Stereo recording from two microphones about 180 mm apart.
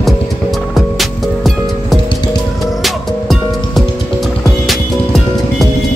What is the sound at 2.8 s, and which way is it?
Music, centre (ahead or behind).